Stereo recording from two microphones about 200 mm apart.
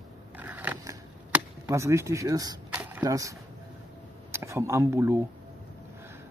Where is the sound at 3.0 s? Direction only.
15° right (ahead or behind).